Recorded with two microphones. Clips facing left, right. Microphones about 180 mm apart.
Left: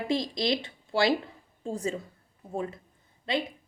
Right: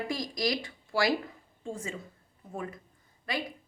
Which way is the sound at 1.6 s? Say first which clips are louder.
Left 6 dB; 35° left (ahead or behind).